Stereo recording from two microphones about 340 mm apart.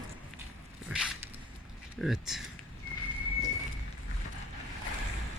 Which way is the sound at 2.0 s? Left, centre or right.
Centre.